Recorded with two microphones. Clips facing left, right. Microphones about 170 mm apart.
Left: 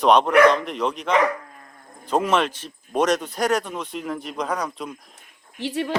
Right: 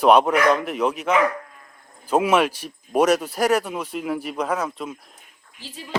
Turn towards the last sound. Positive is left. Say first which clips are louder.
# left 14 dB
turn(degrees=70)  # may be behind; listen again after turning